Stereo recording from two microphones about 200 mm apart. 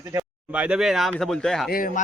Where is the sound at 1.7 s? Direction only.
45° left (ahead or behind).